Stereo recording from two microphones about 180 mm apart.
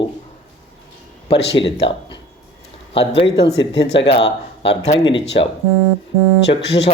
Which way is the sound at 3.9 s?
30° left (ahead or behind).